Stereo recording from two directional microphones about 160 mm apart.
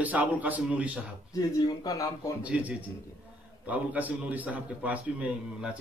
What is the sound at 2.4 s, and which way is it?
A man's voice, 10° right (ahead or behind).